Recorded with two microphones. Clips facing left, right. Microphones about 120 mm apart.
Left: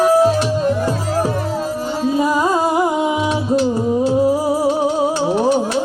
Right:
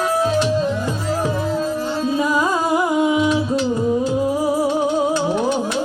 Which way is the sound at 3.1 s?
30° left (ahead or behind).